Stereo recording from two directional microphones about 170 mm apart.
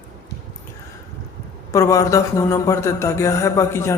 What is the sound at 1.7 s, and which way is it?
Speech, 20° left (ahead or behind).